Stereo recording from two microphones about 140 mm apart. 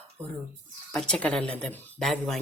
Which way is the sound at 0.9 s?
5° left (ahead or behind).